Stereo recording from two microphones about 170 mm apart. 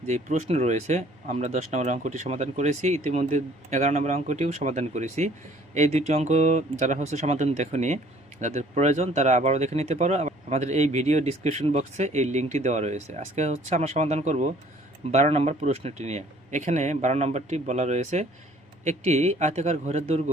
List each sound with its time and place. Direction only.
0.1 s a man's voice: 45° right (ahead or behind)